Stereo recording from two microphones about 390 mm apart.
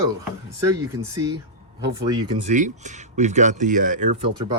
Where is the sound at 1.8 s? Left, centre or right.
Centre.